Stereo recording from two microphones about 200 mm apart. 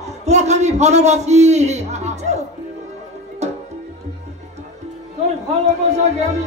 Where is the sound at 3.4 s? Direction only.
35° right (ahead or behind).